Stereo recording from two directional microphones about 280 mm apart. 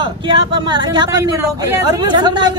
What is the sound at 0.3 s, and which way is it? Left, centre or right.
Speech, centre.